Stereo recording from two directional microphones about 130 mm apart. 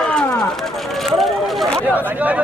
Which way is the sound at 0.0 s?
5° left (ahead or behind).